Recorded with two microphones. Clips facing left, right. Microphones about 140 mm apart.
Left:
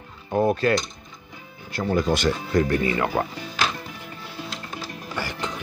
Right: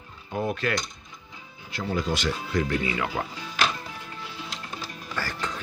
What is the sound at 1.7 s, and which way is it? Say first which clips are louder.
Speech: left 6 dB; 45° left (ahead or behind).